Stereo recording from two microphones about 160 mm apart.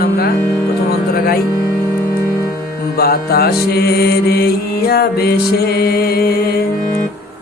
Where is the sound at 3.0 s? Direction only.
75° left (ahead or behind).